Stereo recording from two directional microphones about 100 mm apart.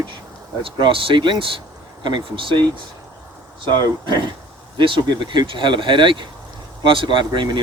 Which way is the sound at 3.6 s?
45° right (ahead or behind).